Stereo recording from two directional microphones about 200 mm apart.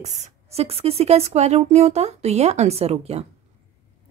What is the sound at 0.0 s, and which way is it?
Speech, 35° right (ahead or behind).